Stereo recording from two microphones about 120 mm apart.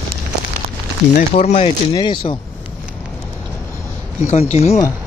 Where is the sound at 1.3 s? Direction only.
65° left (ahead or behind).